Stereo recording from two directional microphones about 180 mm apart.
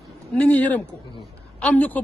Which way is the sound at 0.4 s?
5° left (ahead or behind).